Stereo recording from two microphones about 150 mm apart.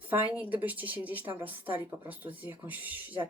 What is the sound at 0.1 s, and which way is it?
Speech, 10° right (ahead or behind).